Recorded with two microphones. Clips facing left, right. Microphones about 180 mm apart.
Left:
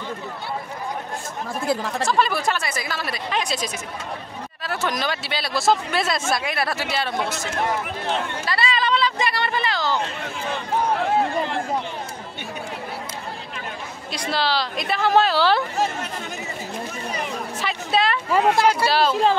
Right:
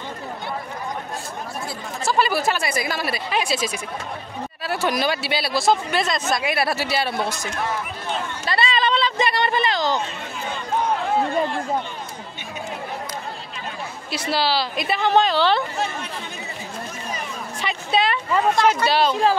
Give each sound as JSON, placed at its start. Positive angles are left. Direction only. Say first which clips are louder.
{"t": 2.0, "sound": "speech", "louder": "right 2 dB", "side_deg": -5}
{"t": 6.4, "sound": "speech", "louder": "right 3 dB", "side_deg": -10}
{"t": 8.5, "sound": "speech", "louder": "right 2 dB", "side_deg": -25}
{"t": 14.1, "sound": "a woman's voice", "louder": "right 1 dB", "side_deg": -5}
{"t": 17.6, "sound": "speech", "louder": "right 1 dB", "side_deg": 0}